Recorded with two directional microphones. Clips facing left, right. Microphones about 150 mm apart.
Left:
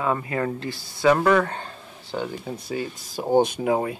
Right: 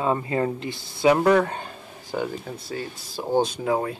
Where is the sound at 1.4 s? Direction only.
15° right (ahead or behind).